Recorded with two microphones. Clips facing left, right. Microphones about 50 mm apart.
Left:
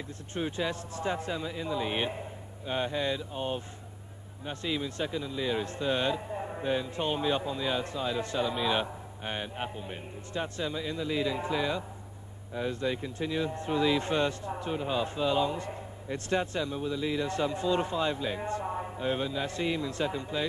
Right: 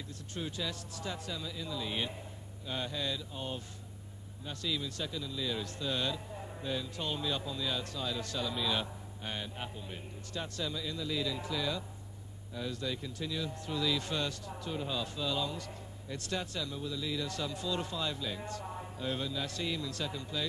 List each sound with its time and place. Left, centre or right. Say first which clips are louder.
0.3 s a man's voice: left 7 dB; left